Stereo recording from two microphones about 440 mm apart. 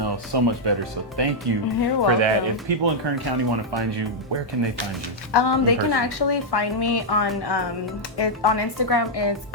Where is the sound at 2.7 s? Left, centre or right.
Right.